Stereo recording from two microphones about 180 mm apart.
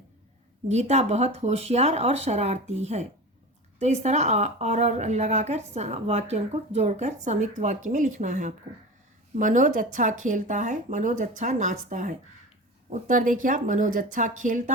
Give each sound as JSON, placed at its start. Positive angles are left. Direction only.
{"t": 0.7, "sound": "speech", "side_deg": -40}